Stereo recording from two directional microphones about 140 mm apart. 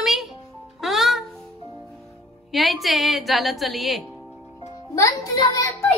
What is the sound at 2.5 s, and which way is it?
A woman's voice, centre (ahead or behind).